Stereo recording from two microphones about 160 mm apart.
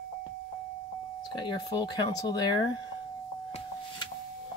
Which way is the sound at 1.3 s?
25° left (ahead or behind).